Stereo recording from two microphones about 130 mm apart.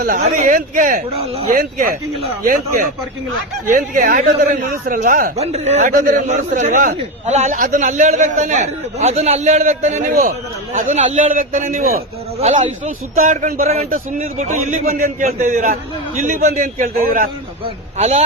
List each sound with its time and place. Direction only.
0.1 s speech: 85° right
3.7 s speech: 90° right
5.4 s a man's voice: 55° right (ahead or behind); by 10.3 s 90° right
10.7 s a man's voice: 55° right (ahead or behind); by 17.2 s 85° right
17.9 s a man's voice: 55° right (ahead or behind)